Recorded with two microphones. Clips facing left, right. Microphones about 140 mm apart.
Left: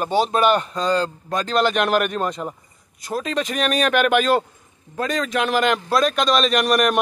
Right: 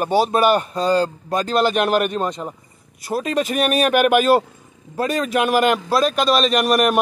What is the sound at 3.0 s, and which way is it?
A man's voice, 10° right (ahead or behind).